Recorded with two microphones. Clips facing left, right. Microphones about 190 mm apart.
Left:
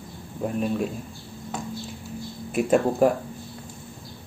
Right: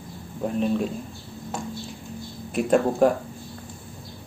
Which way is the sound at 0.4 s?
5° left (ahead or behind).